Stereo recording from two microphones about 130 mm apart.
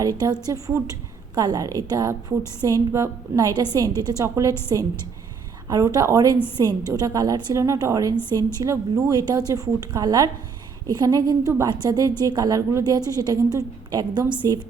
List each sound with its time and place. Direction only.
0.0 s a woman's voice: 30° right (ahead or behind)
5.6 s a woman's voice: 25° right (ahead or behind)
8.1 s a woman's voice: 15° left (ahead or behind)
8.6 s a woman's voice: 25° right (ahead or behind)